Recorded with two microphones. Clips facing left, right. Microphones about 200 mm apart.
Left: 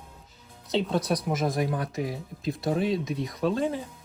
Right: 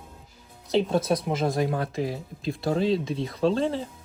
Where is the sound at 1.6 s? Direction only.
25° right (ahead or behind).